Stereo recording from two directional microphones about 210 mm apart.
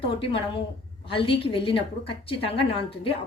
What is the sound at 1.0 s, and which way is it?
A woman's voice, 25° left (ahead or behind).